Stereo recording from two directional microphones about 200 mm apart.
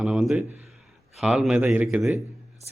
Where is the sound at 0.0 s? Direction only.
5° right (ahead or behind).